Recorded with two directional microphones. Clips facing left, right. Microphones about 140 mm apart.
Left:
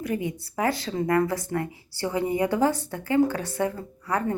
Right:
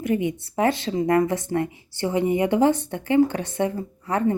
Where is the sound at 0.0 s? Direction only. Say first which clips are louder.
Right 5 dB; 20° right (ahead or behind).